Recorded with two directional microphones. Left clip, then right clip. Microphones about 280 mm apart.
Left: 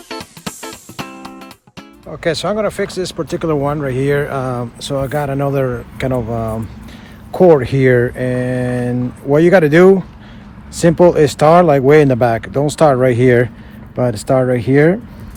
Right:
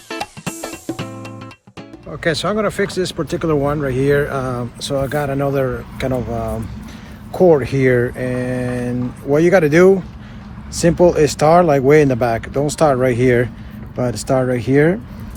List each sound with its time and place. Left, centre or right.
2.2 s speech: centre; by 14.9 s left